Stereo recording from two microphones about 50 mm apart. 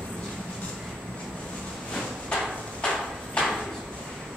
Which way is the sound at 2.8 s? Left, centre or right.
Centre.